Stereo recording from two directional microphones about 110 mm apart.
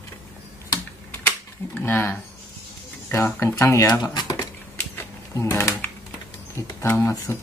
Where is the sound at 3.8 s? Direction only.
40° left (ahead or behind).